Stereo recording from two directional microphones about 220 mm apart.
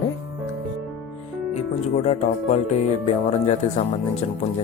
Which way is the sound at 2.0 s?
30° left (ahead or behind).